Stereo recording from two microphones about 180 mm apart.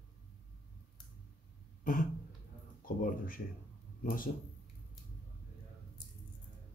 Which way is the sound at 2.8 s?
50° left (ahead or behind).